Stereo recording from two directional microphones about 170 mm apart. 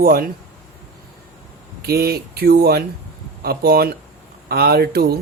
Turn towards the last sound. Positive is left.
turn(degrees=-70)  # may be behind; listen again after turning